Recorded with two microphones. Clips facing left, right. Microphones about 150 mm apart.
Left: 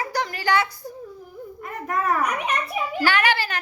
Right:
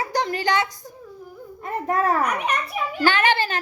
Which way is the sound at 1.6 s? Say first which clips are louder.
Right 4 dB; 30° right (ahead or behind).